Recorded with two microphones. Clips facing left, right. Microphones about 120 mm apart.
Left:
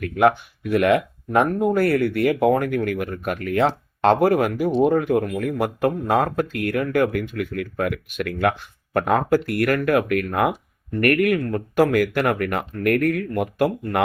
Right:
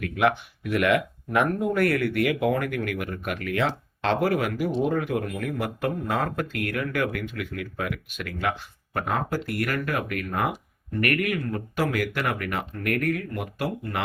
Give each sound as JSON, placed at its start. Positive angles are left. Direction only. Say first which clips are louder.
{"t": 0.0, "sound": "speech", "louder": "left 5 dB", "side_deg": 40}
{"t": 7.3, "sound": "speech", "louder": "left 6 dB", "side_deg": 50}
{"t": 11.0, "sound": "speech", "louder": "left 7 dB", "side_deg": 50}